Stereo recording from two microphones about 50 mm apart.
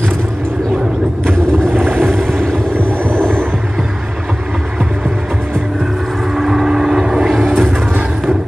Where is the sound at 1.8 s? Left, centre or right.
Right.